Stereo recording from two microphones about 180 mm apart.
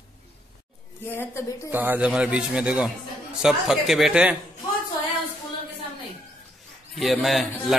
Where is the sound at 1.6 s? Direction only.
10° right (ahead or behind).